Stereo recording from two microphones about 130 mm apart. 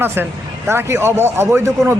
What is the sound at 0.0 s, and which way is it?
Speech, 15° right (ahead or behind).